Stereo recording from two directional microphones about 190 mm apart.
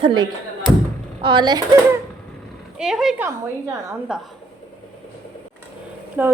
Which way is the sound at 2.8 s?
Centre (ahead or behind).